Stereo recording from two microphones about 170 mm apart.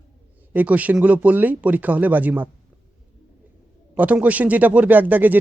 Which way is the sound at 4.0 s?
10° right (ahead or behind).